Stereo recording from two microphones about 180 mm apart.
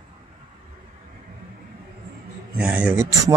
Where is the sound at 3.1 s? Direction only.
20° right (ahead or behind).